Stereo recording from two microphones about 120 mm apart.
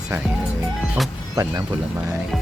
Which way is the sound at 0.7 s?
Centre (ahead or behind).